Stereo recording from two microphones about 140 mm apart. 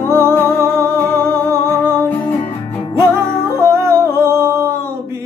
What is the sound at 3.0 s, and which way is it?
Music, 20° right (ahead or behind).